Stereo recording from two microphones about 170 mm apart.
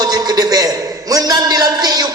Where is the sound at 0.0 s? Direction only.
25° right (ahead or behind).